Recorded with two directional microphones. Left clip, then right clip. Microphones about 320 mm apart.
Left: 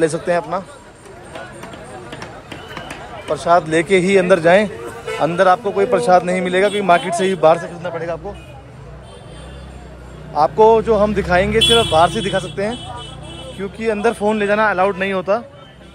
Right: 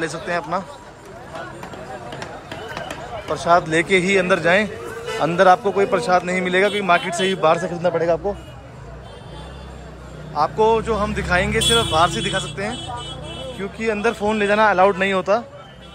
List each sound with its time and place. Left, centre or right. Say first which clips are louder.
0.0 s speech: left 7 dB; centre
3.3 s a man's voice: left 2 dB; centre
7.6 s a man's voice: right 5 dB; centre
10.3 s speech: left 6 dB; centre